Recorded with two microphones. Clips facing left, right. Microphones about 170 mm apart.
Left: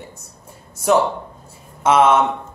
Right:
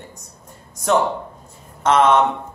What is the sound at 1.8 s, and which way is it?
Speech, 5° left (ahead or behind).